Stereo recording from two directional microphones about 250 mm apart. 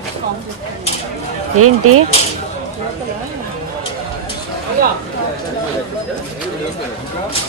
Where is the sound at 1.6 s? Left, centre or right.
Right.